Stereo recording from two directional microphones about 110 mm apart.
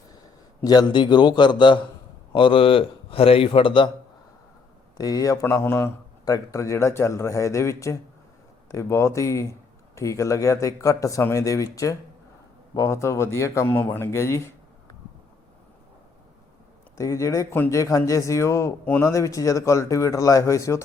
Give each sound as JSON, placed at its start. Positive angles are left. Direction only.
{"t": 0.6, "sound": "a man's voice", "side_deg": 40}
{"t": 4.9, "sound": "speech", "side_deg": 35}
{"t": 17.0, "sound": "speech", "side_deg": 30}